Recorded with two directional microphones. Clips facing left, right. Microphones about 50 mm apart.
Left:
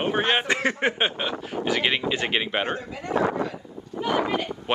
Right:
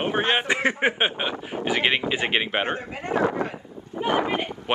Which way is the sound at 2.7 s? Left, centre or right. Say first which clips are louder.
Even; right.